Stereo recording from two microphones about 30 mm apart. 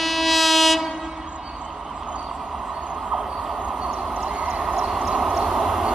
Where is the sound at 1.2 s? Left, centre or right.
Right.